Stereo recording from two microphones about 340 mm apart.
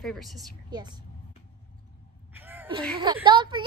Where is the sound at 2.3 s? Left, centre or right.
Centre.